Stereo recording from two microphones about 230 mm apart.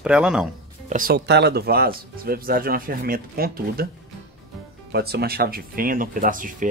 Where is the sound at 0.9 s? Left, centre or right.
Right.